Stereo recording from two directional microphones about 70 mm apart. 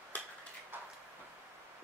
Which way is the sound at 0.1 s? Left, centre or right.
Centre.